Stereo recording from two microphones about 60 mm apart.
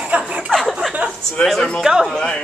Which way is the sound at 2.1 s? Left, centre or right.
Centre.